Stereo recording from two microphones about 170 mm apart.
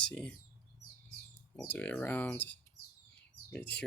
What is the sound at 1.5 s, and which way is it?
Speech, 10° left (ahead or behind).